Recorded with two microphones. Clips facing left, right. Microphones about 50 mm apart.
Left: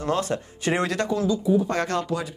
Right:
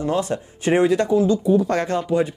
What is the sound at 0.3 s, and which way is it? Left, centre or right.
Speech, centre.